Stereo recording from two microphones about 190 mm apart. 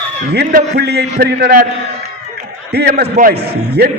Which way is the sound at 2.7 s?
60° right (ahead or behind).